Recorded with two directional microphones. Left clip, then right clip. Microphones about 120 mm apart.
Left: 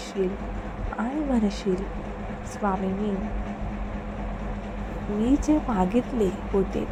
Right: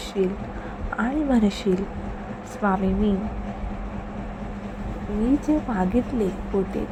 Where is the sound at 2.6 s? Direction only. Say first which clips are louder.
Right 3 dB; 30° right (ahead or behind).